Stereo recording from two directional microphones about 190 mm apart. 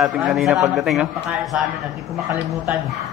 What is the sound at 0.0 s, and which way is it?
A man's voice, centre (ahead or behind).